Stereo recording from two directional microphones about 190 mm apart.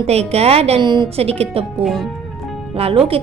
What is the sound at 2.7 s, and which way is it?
Speech, 30° right (ahead or behind).